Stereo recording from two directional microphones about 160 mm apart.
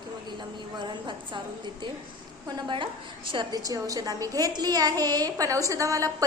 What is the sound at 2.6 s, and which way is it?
A woman's voice, 30° right (ahead or behind).